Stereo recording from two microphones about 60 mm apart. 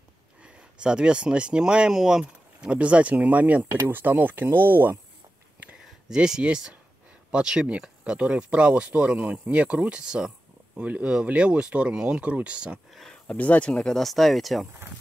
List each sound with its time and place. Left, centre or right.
0.4 s speech: centre; by 4.9 s right
5.9 s speech: centre
12.9 s a sound: centre
13.4 s speech: left
13.9 s speech: centre